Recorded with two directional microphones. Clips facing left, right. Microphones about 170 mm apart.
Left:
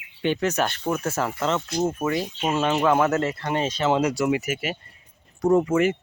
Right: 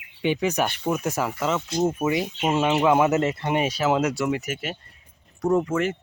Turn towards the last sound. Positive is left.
turn(degrees=5)  # may be behind; listen again after turning